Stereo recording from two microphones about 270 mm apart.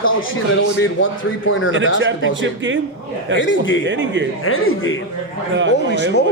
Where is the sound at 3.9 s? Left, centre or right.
Right.